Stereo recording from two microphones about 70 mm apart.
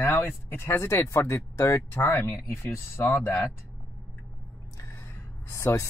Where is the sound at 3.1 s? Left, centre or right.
Left.